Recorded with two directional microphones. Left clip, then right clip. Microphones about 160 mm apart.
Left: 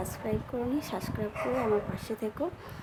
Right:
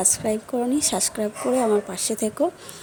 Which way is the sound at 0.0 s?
55° right (ahead or behind).